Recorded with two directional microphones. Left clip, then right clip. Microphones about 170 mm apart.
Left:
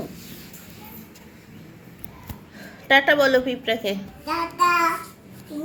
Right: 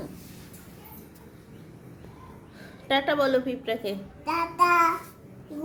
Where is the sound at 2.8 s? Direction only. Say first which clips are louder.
Left 7 dB; 10° left (ahead or behind).